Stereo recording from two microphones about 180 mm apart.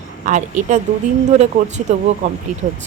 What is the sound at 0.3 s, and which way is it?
Speech, 45° right (ahead or behind).